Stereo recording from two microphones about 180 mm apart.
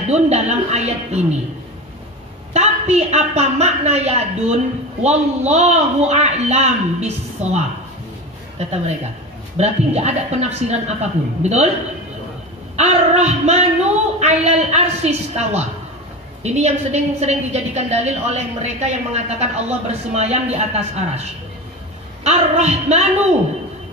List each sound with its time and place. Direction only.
0.1 s a woman's voice: 40° right (ahead or behind)
2.5 s a woman's voice: 40° right (ahead or behind)
9.6 s a woman's voice: 40° right (ahead or behind)
12.7 s a woman's voice: 40° right (ahead or behind)